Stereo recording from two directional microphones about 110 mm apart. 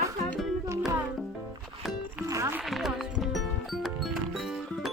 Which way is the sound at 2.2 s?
30° right (ahead or behind).